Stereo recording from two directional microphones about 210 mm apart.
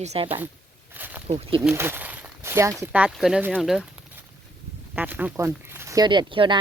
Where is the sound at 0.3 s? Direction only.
10° right (ahead or behind).